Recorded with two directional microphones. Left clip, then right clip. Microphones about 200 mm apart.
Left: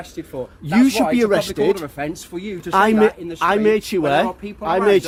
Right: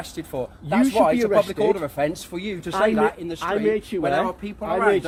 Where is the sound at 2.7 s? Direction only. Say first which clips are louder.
Left 5 dB; 55° left (ahead or behind).